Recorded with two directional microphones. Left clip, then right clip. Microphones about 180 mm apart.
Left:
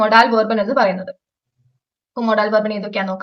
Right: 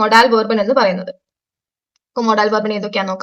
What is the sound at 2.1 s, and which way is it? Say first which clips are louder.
A woman's voice: right 1 dB; 25° right (ahead or behind).